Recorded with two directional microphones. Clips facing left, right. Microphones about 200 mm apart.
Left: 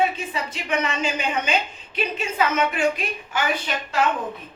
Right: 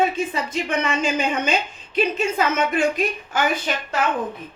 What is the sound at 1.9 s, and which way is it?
Speech, 40° right (ahead or behind).